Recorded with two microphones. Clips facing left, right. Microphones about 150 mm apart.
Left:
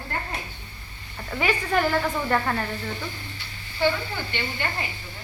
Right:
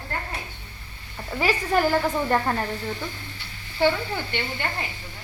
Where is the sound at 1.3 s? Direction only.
10° right (ahead or behind).